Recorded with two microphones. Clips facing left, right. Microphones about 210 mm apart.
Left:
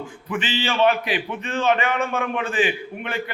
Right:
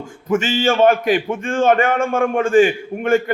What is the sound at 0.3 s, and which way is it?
A man's voice, 45° right (ahead or behind).